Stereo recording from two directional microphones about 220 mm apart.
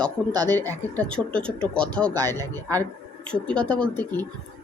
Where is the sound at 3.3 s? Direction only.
5° left (ahead or behind).